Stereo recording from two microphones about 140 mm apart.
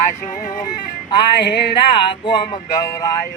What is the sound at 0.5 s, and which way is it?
Speech, 30° left (ahead or behind).